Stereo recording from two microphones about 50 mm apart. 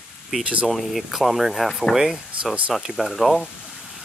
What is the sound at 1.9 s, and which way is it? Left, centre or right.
Speech, centre.